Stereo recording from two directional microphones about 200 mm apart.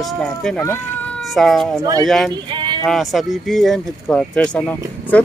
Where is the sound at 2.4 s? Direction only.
25° right (ahead or behind).